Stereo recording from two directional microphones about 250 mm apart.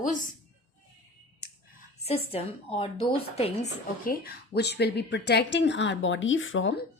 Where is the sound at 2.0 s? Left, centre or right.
Left.